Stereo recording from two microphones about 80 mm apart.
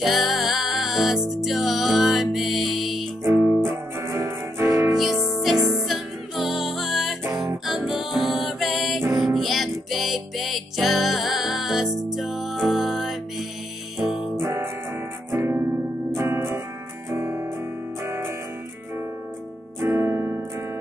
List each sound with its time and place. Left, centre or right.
0.0 s music: centre
3.6 s music: right
4.9 s music: centre
15.3 s music: right
19.8 s music: right